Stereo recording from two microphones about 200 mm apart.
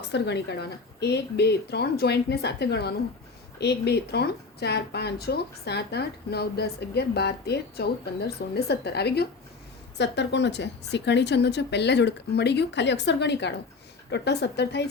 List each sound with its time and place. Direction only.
0.1 s speech: 60° left (ahead or behind)